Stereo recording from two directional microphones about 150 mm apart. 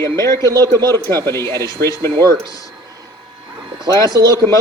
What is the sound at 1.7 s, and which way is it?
Speech, 25° left (ahead or behind).